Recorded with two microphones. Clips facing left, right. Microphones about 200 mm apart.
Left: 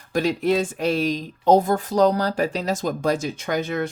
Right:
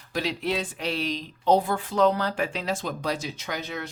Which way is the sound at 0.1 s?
45° left (ahead or behind).